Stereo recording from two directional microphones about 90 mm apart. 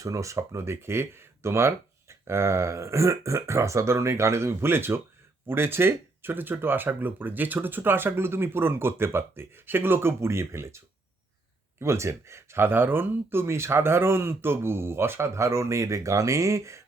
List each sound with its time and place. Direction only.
0.0 s speech: 35° right (ahead or behind)
11.8 s speech: 30° right (ahead or behind)